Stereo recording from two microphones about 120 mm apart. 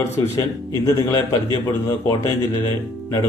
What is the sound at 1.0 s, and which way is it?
Speech, 25° left (ahead or behind).